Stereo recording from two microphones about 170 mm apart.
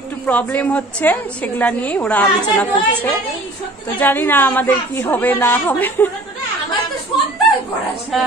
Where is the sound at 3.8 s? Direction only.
10° left (ahead or behind).